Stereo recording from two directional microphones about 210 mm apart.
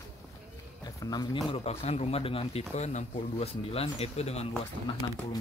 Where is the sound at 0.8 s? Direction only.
20° left (ahead or behind).